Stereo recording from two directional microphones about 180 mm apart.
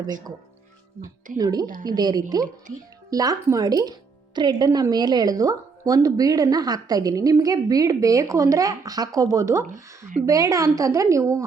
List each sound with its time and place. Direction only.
0.0 s speech: 20° right (ahead or behind)
1.4 s a woman's voice: 20° right (ahead or behind)